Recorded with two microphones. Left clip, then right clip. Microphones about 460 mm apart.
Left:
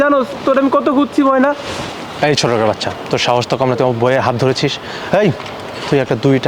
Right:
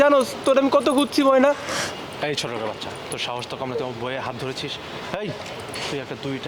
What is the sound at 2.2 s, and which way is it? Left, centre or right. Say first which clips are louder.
Speech: left 13 dB; left.